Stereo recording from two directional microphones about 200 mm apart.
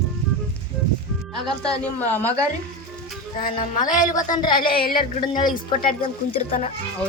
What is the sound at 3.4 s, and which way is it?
Speech, 45° left (ahead or behind).